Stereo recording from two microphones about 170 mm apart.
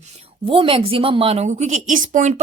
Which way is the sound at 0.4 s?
30° right (ahead or behind).